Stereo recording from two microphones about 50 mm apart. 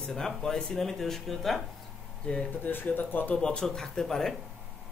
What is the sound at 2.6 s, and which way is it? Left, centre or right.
Speech, left.